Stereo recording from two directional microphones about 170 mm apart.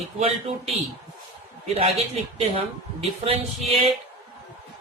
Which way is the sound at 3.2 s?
35° right (ahead or behind).